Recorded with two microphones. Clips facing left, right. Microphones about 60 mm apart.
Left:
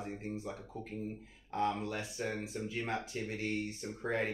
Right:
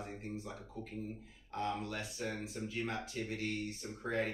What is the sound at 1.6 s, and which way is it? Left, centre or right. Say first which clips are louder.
Speech: left 4 dB; left.